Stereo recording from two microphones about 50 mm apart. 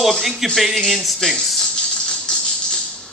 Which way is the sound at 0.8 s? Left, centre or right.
Centre.